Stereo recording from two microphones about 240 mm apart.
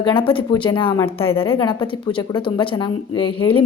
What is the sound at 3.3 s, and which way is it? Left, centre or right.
Speech, left.